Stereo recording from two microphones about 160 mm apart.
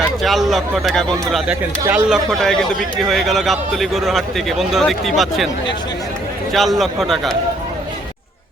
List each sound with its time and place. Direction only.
0.2 s a man's voice: centre (ahead or behind)
1.8 s speech: 20° right (ahead or behind)
2.0 s a man's voice: centre (ahead or behind)
6.5 s a man's voice: centre (ahead or behind)